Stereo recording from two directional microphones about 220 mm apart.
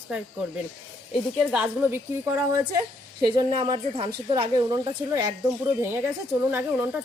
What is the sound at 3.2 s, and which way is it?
A woman's voice, 20° right (ahead or behind).